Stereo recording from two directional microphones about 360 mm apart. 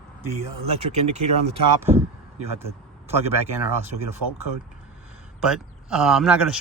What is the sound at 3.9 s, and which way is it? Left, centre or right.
Speech, right.